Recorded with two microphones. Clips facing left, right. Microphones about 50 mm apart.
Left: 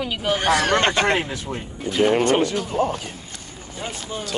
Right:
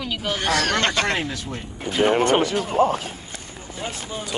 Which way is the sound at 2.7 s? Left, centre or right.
Right.